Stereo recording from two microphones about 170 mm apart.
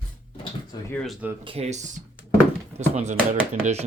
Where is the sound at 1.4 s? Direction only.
35° right (ahead or behind).